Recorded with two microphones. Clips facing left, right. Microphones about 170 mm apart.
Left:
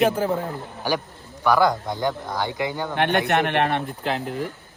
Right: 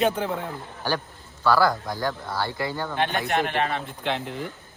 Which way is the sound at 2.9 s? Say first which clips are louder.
Left 5 dB; 65° left (ahead or behind).